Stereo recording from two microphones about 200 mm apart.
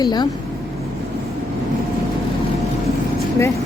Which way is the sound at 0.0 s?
20° left (ahead or behind).